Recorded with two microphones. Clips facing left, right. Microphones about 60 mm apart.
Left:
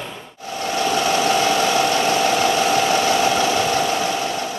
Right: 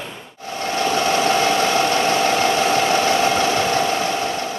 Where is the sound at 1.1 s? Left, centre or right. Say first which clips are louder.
Right 1 dB; right.